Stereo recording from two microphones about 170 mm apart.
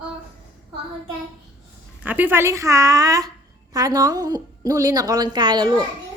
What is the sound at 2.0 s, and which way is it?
A woman's voice, 10° right (ahead or behind).